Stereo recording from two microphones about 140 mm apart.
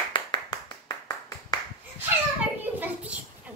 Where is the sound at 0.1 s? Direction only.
30° left (ahead or behind).